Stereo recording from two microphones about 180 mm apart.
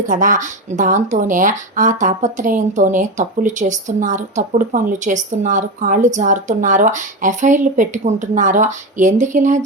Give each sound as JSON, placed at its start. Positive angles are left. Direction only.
{"t": 0.0, "sound": "speech", "side_deg": -45}